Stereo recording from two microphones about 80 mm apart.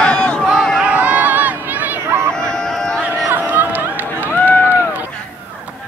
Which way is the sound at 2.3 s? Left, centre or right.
Centre.